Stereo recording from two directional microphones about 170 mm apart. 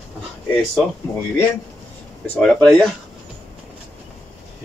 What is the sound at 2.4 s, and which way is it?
Speech, centre (ahead or behind).